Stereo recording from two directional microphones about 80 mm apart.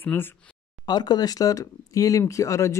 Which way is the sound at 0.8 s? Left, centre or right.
Left.